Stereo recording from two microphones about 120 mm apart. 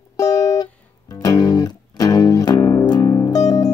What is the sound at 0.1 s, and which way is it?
Music, 30° left (ahead or behind).